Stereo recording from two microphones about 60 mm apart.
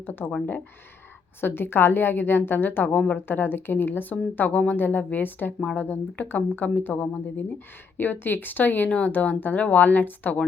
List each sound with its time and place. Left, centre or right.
0.0 s speech: left
1.4 s speech: left
2.9 s speech: left
3.2 s speech: left